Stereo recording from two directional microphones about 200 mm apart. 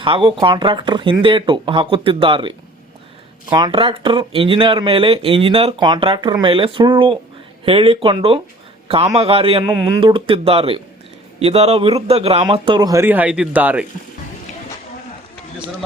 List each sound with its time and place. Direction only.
0.0 s speech: 25° right (ahead or behind)
3.5 s speech: 25° right (ahead or behind)